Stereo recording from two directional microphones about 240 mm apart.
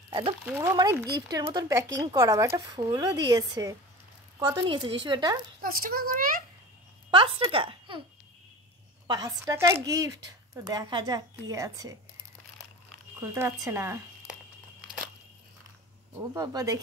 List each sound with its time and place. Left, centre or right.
0.5 s a woman's voice: centre
5.6 s a child's voice: right
7.1 s speech: right
9.0 s a woman's voice: centre
13.2 s a woman's voice: centre
16.2 s a woman's voice: centre